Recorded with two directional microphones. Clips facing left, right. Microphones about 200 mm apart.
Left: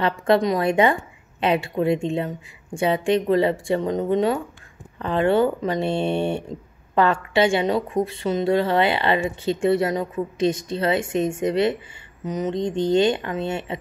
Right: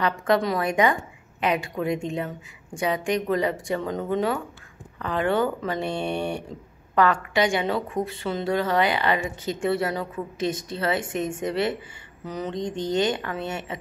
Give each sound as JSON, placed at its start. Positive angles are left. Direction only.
{"t": 0.0, "sound": "a woman's voice", "side_deg": 25}